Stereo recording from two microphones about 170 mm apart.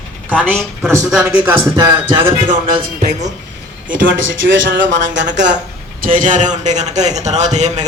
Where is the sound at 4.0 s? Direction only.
90° right.